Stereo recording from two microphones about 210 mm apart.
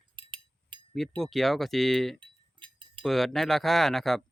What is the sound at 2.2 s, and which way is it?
Chink, 25° right (ahead or behind).